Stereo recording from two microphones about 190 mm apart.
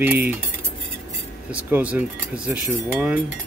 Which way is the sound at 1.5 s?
5° right (ahead or behind).